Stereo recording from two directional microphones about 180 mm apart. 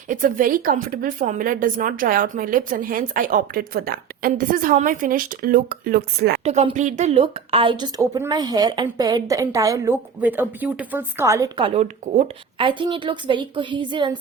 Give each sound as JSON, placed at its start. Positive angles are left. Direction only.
{"t": 0.1, "sound": "a woman's voice", "side_deg": -50}
{"t": 6.4, "sound": "a woman's voice", "side_deg": -35}